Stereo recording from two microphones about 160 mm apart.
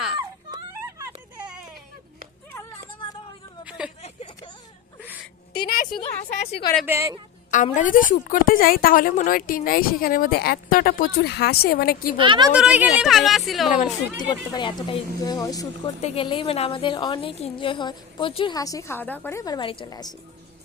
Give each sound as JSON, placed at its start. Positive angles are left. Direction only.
{"t": 0.2, "sound": "music", "side_deg": -25}
{"t": 3.6, "sound": "a sound", "side_deg": -5}
{"t": 5.6, "sound": "a woman's voice", "side_deg": 65}
{"t": 6.3, "sound": "a woman's voice", "side_deg": 45}
{"t": 6.8, "sound": "speech", "side_deg": -15}
{"t": 7.5, "sound": "a woman's voice", "side_deg": 50}
{"t": 12.1, "sound": "a woman's voice", "side_deg": -30}
{"t": 12.5, "sound": "speech", "side_deg": -5}
{"t": 13.7, "sound": "a woman's voice", "side_deg": 55}
{"t": 14.5, "sound": "speech", "side_deg": 30}
{"t": 16.0, "sound": "a woman's voice", "side_deg": 40}